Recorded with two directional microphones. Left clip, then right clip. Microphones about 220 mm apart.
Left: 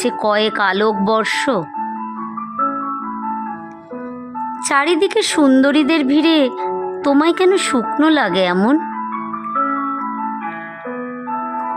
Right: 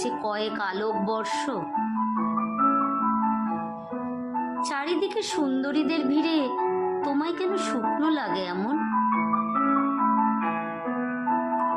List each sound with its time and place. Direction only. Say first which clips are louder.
0.0 s speech: left 12 dB; 40° left (ahead or behind)
4.7 s speech: left 16 dB; 45° left (ahead or behind)